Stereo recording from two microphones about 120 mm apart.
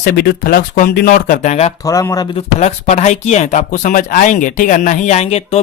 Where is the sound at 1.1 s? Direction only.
75° left (ahead or behind).